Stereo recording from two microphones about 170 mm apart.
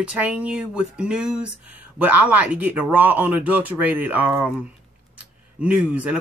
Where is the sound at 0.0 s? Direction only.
5° right (ahead or behind).